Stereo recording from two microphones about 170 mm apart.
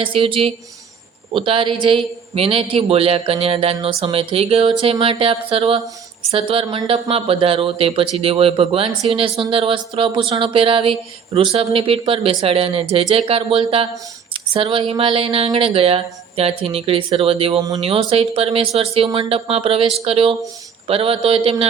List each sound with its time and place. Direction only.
0.0 s a man's voice: 30° right (ahead or behind)